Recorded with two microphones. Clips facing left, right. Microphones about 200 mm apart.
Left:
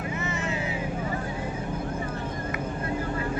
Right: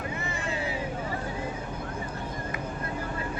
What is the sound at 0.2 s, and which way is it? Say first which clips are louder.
Vehicle: left 2 dB; 35° right (ahead or behind).